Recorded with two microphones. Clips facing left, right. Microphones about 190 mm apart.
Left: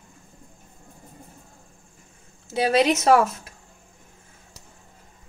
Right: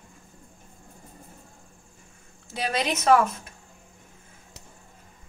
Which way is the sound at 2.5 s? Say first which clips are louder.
Left 8 dB; 25° left (ahead or behind).